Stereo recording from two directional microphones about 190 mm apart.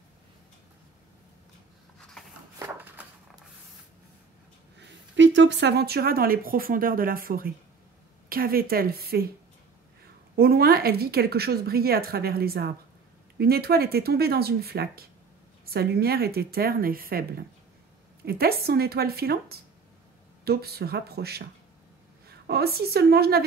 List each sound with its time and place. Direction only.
2.6 s a sound: 10° right (ahead or behind)
4.7 s a woman's voice: 75° right (ahead or behind); by 9.3 s 55° right (ahead or behind)
10.3 s a woman's voice: 55° right (ahead or behind)